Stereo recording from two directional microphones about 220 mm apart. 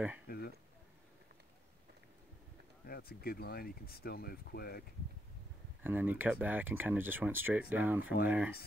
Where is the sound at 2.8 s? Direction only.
45° left (ahead or behind).